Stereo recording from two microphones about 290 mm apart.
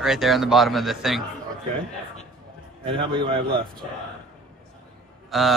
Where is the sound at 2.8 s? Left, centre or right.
Centre.